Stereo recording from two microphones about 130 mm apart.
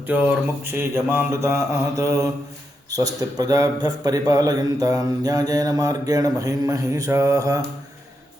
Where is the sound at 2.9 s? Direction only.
30° right (ahead or behind).